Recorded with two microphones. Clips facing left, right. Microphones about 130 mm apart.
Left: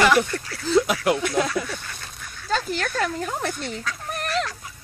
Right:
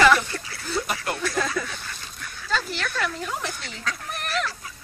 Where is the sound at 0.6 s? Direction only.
90° left.